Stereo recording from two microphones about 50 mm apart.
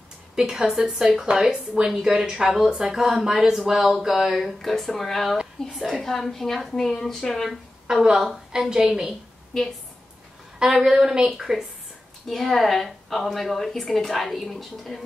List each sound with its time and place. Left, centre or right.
0.4 s a woman's voice: centre
5.8 s a woman's voice: centre
6.0 s a woman's voice: centre
7.9 s a woman's voice: centre
9.5 s a woman's voice: centre
10.6 s a woman's voice: centre
12.3 s a woman's voice: centre